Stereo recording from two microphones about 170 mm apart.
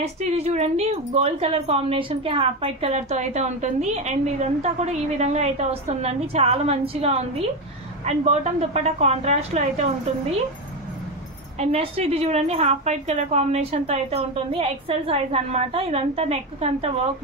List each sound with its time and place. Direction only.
0.0 s a woman's voice: 40° right (ahead or behind)
11.6 s a woman's voice: 40° right (ahead or behind)